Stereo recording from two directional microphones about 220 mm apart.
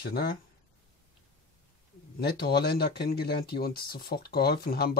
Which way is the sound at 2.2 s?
45° left (ahead or behind).